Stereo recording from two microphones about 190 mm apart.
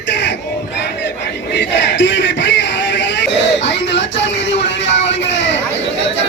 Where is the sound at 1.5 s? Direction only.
70° left (ahead or behind).